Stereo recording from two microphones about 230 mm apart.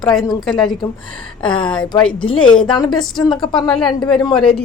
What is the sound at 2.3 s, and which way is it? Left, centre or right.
A woman's voice, left.